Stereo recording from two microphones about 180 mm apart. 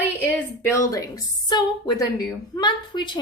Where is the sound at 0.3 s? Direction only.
15° left (ahead or behind).